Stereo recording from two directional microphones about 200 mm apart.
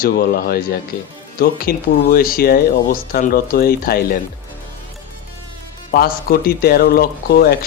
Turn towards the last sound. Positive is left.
turn(degrees=50)  # may be behind; listen again after turning